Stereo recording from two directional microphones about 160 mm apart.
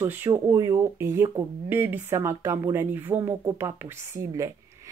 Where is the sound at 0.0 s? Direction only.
15° right (ahead or behind).